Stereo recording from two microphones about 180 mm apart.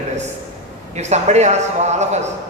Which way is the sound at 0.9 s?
40° right (ahead or behind).